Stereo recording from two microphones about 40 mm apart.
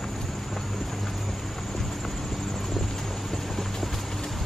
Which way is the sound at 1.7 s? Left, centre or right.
Centre.